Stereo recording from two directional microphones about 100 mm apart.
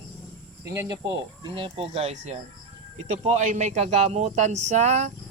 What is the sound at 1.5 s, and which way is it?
Speech, 65° right (ahead or behind).